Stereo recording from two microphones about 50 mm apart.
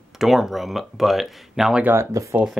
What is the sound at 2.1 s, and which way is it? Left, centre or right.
Speech, right.